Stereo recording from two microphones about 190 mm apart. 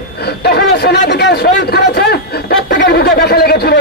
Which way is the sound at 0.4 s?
60° left (ahead or behind).